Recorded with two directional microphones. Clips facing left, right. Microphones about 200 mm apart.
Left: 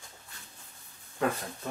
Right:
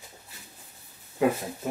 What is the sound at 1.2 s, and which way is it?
Speech, 15° right (ahead or behind).